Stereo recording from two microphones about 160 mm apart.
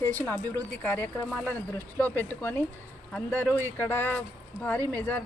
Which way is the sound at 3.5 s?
15° right (ahead or behind).